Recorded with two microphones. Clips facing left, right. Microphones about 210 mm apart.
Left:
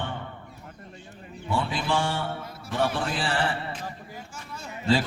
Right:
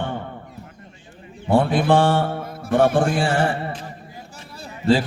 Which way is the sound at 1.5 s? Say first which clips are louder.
Right 10 dB; 55° right (ahead or behind).